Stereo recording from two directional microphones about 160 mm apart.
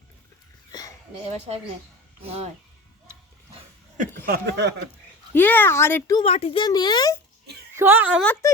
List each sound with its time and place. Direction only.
0.7 s a sound: 25° left (ahead or behind)
1.5 s a woman's voice: 40° right (ahead or behind)
4.3 s speech: 90° right
5.3 s speech: 10° left (ahead or behind)
6.1 s speech: 40° left (ahead or behind)
7.8 s a woman's voice: 15° right (ahead or behind)
8.2 s speech: 10° left (ahead or behind)